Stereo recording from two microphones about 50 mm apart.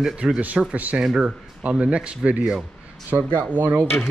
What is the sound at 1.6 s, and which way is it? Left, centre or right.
Speech, right.